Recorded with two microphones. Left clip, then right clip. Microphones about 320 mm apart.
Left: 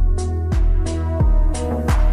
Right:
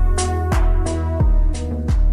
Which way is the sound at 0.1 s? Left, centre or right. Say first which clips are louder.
Right 7 dB; right.